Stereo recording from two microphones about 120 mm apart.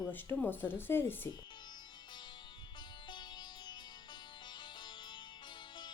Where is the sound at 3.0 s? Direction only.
40° left (ahead or behind).